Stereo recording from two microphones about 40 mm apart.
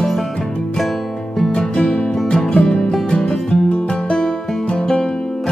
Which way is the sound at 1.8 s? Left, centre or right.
Centre.